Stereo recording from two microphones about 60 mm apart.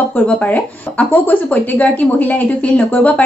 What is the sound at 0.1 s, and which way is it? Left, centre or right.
Speech, left.